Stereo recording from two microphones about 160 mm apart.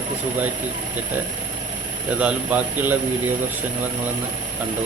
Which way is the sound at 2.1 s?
10° right (ahead or behind).